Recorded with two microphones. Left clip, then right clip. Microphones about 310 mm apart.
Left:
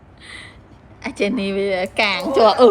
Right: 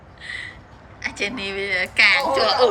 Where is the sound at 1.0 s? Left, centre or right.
Centre.